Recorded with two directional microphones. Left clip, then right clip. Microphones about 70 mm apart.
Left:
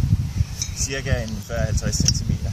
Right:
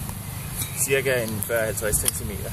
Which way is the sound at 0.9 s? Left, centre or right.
Right.